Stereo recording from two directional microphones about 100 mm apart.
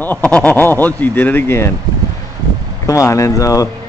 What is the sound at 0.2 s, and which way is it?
Speech, 10° left (ahead or behind).